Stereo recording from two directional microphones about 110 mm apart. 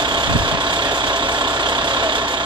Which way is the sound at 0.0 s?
45° right (ahead or behind).